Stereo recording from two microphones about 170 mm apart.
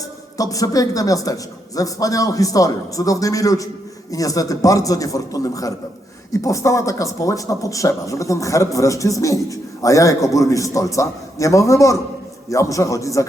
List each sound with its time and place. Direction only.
0.3 s speech: 20° left (ahead or behind)